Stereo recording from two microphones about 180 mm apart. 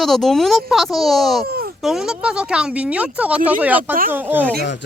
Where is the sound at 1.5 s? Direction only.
60° right (ahead or behind).